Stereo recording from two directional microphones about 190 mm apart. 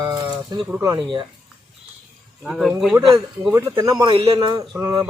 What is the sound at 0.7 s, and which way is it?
Speech, 15° right (ahead or behind).